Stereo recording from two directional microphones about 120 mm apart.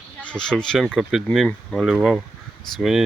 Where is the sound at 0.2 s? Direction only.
10° left (ahead or behind).